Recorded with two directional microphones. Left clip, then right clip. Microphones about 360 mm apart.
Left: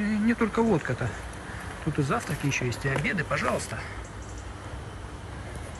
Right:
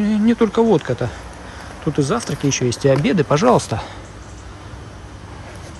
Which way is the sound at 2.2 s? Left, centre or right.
Right.